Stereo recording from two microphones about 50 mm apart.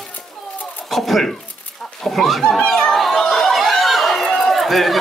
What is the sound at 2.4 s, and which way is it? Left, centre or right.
Chatter, centre.